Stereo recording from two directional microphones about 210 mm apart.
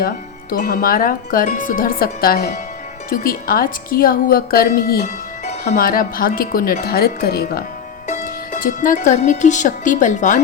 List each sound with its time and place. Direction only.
0.5 s a woman's voice: 40° left (ahead or behind)